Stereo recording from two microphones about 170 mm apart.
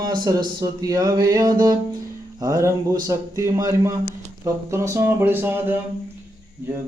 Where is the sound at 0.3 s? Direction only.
20° right (ahead or behind).